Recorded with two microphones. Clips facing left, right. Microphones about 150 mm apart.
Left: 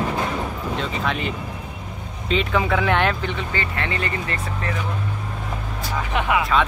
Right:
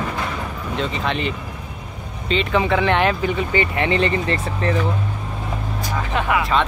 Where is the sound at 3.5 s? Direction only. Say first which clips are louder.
Right 7 dB; 15° right (ahead or behind).